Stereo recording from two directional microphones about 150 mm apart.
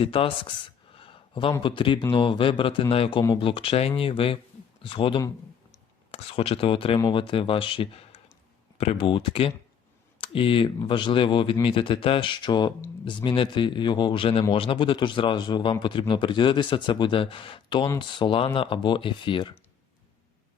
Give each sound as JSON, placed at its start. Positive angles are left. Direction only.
{"t": 0.0, "sound": "speech", "side_deg": 35}
{"t": 0.9, "sound": "a sound", "side_deg": 35}
{"t": 1.6, "sound": "speech", "side_deg": 30}